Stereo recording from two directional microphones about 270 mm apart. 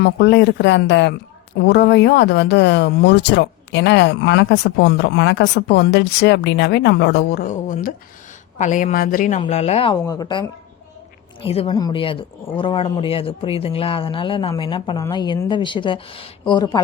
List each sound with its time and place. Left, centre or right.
0.0 s a man's voice: left; by 16.8 s centre